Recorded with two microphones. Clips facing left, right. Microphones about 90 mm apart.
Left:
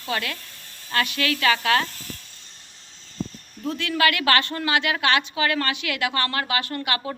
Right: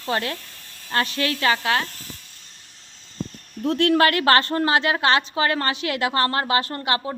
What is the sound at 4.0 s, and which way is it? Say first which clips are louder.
Speech: left 2 dB; 40° right (ahead or behind).